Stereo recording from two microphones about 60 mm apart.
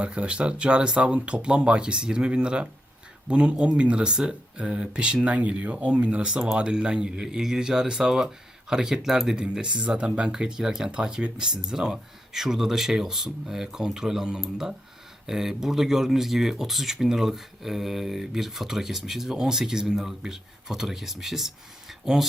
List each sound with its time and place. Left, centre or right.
0.0 s speech: centre